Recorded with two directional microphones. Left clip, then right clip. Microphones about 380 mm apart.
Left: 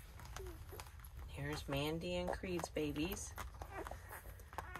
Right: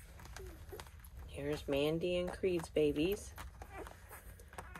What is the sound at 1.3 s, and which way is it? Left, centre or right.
Speech, centre.